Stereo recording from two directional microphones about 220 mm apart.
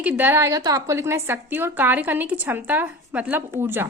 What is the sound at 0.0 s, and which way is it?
A woman's voice, 5° right (ahead or behind).